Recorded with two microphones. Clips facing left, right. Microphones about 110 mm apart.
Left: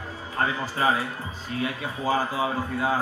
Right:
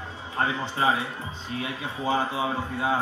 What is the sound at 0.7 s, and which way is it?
Speech, 25° right (ahead or behind).